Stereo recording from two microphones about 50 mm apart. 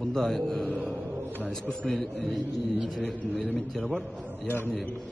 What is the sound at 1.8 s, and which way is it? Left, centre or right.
Speech, centre.